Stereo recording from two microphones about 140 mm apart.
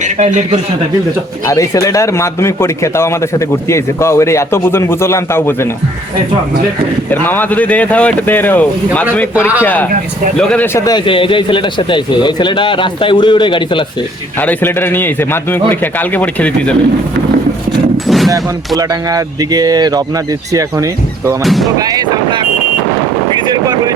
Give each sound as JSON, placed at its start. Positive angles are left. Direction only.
{"t": 0.0, "sound": "a man's voice", "side_deg": -55}
{"t": 1.5, "sound": "speech", "side_deg": 25}
{"t": 7.1, "sound": "a man's voice", "side_deg": 15}
{"t": 10.3, "sound": "a man's voice", "side_deg": 5}
{"t": 10.8, "sound": "speech", "side_deg": 25}
{"t": 11.0, "sound": "a man's voice", "side_deg": 40}
{"t": 14.3, "sound": "a man's voice", "side_deg": 15}
{"t": 17.9, "sound": "a sound", "side_deg": 0}
{"t": 18.8, "sound": "speech", "side_deg": -25}
{"t": 21.4, "sound": "speech", "side_deg": 0}
{"t": 21.8, "sound": "speech", "side_deg": -25}
{"t": 23.5, "sound": "vehicle", "side_deg": -25}